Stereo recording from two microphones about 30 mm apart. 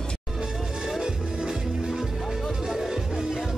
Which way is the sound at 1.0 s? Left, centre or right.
Right.